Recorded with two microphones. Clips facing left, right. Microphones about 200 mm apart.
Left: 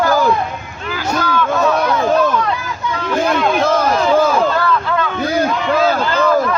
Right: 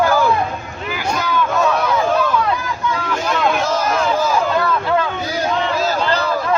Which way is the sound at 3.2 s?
55° left (ahead or behind).